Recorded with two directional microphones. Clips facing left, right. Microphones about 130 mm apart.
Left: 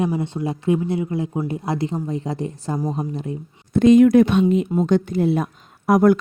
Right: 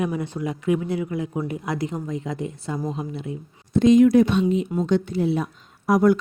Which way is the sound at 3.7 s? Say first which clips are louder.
Left 3 dB; 55° left (ahead or behind).